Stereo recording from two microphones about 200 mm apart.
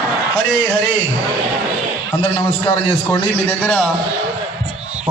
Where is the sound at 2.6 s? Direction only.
10° left (ahead or behind).